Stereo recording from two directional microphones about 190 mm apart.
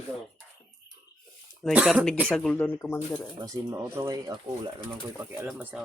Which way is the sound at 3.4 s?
20° right (ahead or behind).